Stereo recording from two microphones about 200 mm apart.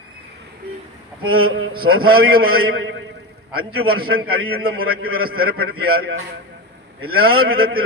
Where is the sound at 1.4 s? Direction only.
90° right.